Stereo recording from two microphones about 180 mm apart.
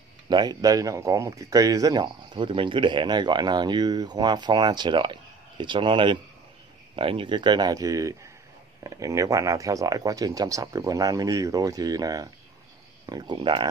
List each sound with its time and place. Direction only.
0.3 s speech: 25° right (ahead or behind)